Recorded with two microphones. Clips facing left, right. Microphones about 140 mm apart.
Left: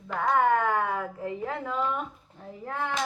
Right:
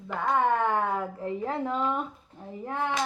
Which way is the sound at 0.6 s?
30° right (ahead or behind).